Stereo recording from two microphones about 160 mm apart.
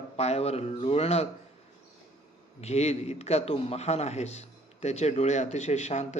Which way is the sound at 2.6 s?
40° left (ahead or behind).